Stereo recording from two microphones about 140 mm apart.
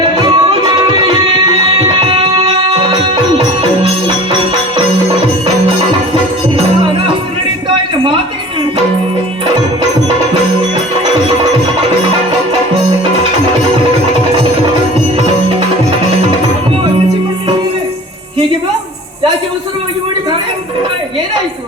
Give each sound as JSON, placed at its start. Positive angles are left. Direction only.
{"t": 0.2, "sound": "music", "side_deg": -35}